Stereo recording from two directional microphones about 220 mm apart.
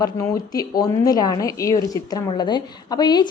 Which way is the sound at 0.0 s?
15° left (ahead or behind).